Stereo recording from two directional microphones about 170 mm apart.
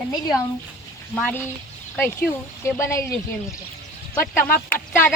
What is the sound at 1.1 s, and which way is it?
Speech, 5° left (ahead or behind).